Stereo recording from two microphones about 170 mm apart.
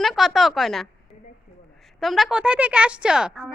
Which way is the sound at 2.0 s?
Centre (ahead or behind).